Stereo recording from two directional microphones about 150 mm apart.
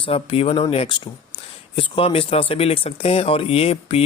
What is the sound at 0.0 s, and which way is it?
Speech, 40° left (ahead or behind).